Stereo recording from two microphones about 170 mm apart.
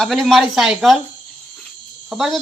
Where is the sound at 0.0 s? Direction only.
Centre (ahead or behind).